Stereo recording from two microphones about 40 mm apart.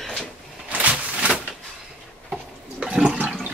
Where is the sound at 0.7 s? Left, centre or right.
Right.